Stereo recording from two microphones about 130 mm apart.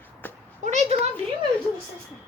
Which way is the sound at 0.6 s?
65° right (ahead or behind).